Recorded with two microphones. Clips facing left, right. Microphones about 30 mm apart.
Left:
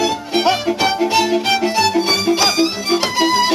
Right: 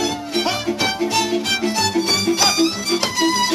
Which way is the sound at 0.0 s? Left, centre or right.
Centre.